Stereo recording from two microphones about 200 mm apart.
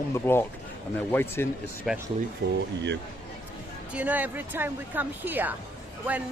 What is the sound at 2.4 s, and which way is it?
Speech, 55° right (ahead or behind).